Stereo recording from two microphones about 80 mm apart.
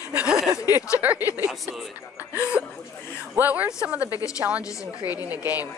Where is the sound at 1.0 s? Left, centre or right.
Right.